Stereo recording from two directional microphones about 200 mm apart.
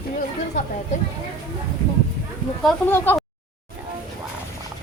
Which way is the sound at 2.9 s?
10° left (ahead or behind).